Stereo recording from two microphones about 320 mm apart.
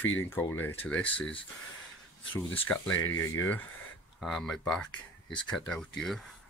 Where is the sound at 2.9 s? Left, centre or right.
Left.